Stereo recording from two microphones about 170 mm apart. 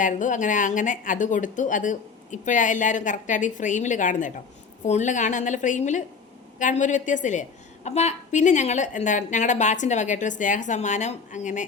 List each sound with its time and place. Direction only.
0.0 s speech: 50° left (ahead or behind)